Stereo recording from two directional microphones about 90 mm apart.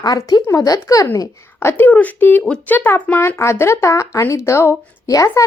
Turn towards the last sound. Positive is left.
turn(degrees=35)  # may be behind; listen again after turning